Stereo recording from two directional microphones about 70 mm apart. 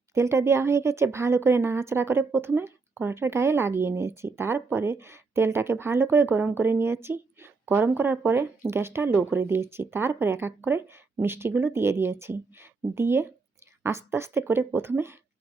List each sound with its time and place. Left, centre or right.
0.1 s speech: right